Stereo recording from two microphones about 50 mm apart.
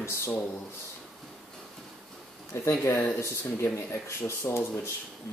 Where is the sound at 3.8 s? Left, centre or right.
Left.